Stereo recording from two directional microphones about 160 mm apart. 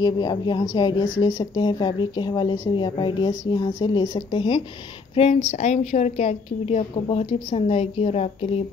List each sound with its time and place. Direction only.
0.0 s speech: 25° left (ahead or behind)
5.3 s a woman's voice: 45° left (ahead or behind)